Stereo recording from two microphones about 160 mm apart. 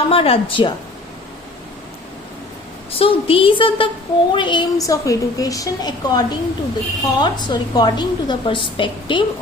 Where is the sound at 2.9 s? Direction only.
35° left (ahead or behind).